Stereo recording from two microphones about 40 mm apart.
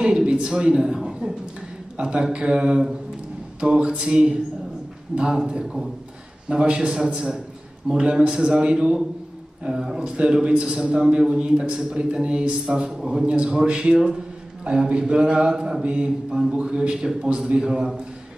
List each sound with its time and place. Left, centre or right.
0.0 s a man's voice: right
6.5 s a man's voice: right
8.3 s a man's voice: centre
17.6 s a man's voice: centre